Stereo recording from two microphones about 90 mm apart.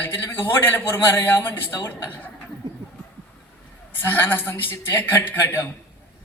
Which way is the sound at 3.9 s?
20° left (ahead or behind).